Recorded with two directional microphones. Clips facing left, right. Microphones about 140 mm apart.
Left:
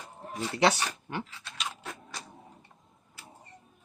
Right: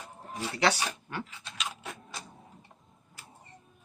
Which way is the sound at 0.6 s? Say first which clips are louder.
Left 2 dB; 25° left (ahead or behind).